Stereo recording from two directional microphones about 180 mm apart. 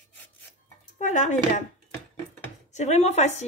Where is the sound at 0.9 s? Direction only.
45° left (ahead or behind).